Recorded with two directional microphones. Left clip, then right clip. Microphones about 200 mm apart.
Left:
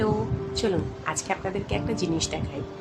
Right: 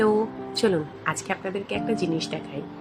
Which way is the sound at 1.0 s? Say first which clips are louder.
Right 1 dB; 10° right (ahead or behind).